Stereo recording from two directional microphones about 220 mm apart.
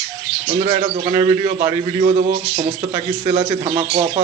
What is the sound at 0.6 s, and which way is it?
A man's voice, 25° right (ahead or behind).